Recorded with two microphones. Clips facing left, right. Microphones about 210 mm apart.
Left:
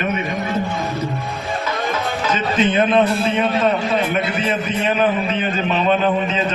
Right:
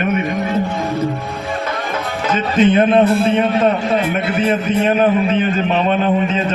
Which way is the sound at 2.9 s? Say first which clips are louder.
Right 4 dB; 50° right (ahead or behind).